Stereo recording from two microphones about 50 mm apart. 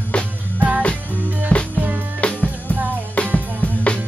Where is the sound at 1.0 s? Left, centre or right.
Right.